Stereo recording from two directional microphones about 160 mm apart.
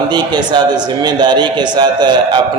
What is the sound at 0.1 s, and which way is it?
A man's voice, 25° right (ahead or behind).